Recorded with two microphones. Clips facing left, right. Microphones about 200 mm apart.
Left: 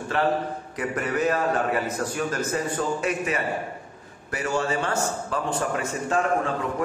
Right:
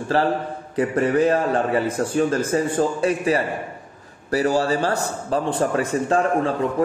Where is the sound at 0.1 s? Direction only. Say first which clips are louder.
Right 2 dB; 35° right (ahead or behind).